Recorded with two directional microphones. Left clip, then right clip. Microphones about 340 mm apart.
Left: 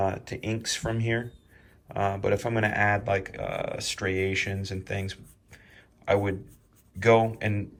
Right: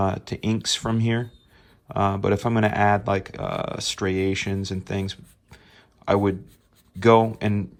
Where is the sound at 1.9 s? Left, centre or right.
Centre.